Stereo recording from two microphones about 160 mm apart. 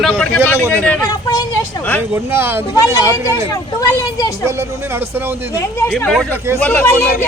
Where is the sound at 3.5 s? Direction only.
20° left (ahead or behind).